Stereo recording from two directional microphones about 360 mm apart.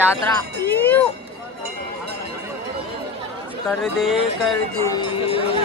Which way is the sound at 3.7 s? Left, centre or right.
Centre.